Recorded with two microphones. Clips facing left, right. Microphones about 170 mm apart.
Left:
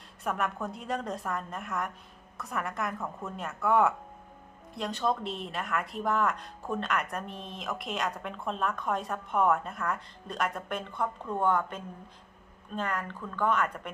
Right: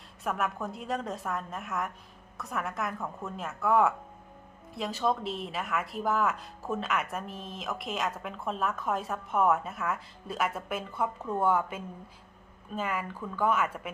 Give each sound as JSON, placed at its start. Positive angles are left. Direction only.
{"t": 0.3, "sound": "speech", "side_deg": 0}